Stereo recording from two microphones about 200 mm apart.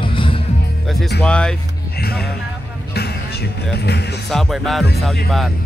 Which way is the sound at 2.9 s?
55° left (ahead or behind).